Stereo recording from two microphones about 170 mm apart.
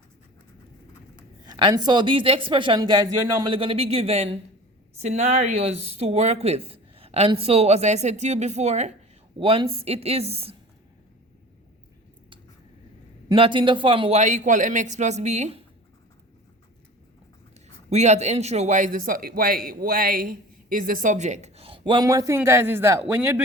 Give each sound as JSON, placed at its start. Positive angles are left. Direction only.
{"t": 1.5, "sound": "speech", "side_deg": -25}
{"t": 13.2, "sound": "a man's voice", "side_deg": -30}
{"t": 14.2, "sound": "speech", "side_deg": -45}
{"t": 17.8, "sound": "speech", "side_deg": -40}